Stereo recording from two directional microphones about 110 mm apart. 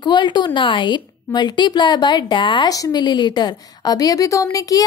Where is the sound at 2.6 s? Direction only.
35° left (ahead or behind).